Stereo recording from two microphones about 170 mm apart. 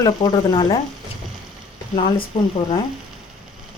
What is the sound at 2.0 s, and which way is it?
Speech, 30° left (ahead or behind).